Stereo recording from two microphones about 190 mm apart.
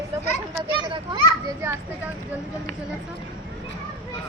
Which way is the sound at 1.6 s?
15° right (ahead or behind).